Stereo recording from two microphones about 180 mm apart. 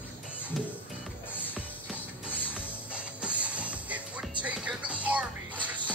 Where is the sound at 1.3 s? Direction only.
10° left (ahead or behind).